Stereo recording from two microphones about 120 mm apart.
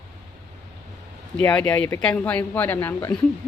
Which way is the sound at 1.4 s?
10° left (ahead or behind).